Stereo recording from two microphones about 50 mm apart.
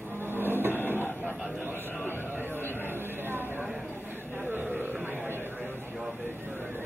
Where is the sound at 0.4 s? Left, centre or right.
Right.